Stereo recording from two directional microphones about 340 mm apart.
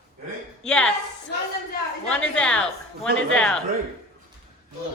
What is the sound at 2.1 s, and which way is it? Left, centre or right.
Speech, centre.